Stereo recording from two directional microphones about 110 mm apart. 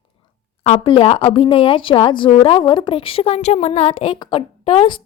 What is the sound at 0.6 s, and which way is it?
Speech, 70° left (ahead or behind).